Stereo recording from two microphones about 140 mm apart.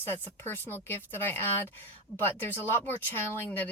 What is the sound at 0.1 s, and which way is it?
Speech, 15° left (ahead or behind).